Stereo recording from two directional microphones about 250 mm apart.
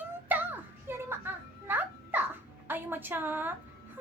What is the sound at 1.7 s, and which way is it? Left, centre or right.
Babbling, centre.